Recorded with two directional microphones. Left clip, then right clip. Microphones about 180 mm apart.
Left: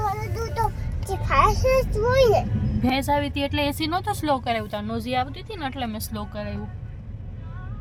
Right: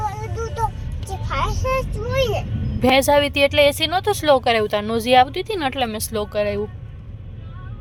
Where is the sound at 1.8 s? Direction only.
20° left (ahead or behind).